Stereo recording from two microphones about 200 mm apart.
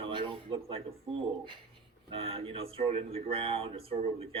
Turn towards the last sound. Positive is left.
turn(degrees=-30)  # may be behind; listen again after turning